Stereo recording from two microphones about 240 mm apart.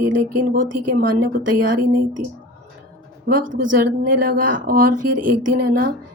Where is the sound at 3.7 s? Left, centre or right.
Right.